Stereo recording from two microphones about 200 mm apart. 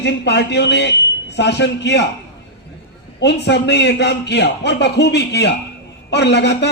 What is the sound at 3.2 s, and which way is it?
A man's voice, 60° left (ahead or behind).